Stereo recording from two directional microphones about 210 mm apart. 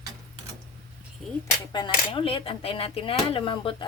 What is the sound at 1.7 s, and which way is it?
Speech, 25° left (ahead or behind).